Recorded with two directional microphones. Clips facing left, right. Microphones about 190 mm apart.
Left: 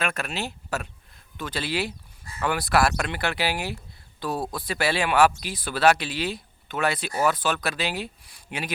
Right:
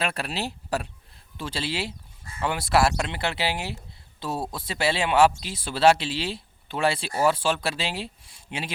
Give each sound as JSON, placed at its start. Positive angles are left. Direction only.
{"t": 0.0, "sound": "speech", "side_deg": -30}